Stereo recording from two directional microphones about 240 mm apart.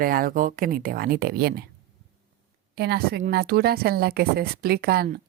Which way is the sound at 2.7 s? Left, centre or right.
Right.